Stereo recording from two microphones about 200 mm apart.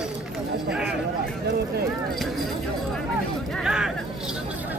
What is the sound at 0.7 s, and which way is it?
Speech, 5° right (ahead or behind).